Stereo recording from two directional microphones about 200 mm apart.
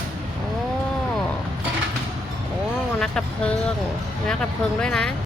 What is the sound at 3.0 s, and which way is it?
Speech, 5° left (ahead or behind).